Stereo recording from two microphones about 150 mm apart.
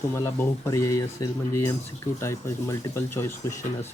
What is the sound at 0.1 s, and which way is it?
Speech, 20° left (ahead or behind).